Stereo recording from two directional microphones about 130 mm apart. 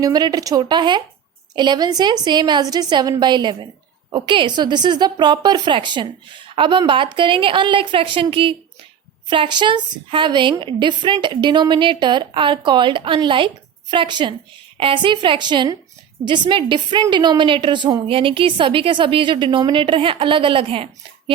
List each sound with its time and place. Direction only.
0.0 s a woman's voice: 30° right (ahead or behind)